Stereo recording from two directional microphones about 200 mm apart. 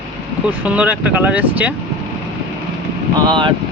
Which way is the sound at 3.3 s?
25° right (ahead or behind).